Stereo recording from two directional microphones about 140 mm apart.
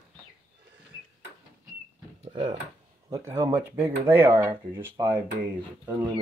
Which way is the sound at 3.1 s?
20° right (ahead or behind).